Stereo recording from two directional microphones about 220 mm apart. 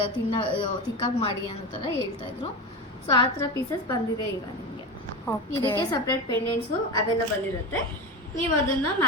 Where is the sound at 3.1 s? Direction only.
20° left (ahead or behind).